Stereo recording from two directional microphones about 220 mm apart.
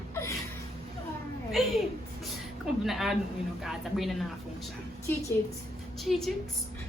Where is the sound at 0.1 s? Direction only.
10° left (ahead or behind).